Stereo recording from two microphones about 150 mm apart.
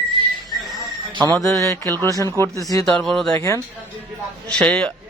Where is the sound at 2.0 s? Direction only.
20° left (ahead or behind).